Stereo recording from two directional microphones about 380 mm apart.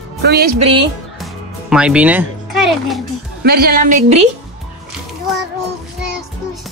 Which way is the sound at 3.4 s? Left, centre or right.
Right.